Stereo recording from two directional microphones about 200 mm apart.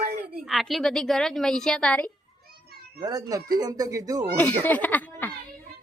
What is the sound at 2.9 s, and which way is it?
Speech, 20° right (ahead or behind).